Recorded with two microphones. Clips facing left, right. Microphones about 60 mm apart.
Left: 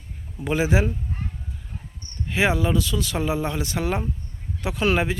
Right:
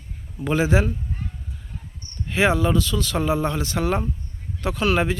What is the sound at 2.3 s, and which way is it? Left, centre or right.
Speech, centre.